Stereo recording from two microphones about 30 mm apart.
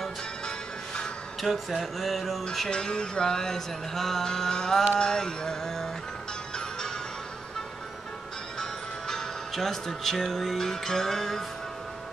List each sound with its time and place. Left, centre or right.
0.5 s music: left
1.4 s a sound: centre
2.7 s music: left
8.5 s speech: centre